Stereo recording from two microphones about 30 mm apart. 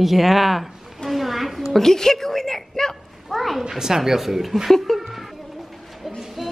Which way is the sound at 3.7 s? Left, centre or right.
Centre.